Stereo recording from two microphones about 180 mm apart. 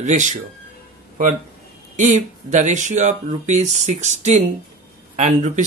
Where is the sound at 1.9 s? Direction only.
40° right (ahead or behind).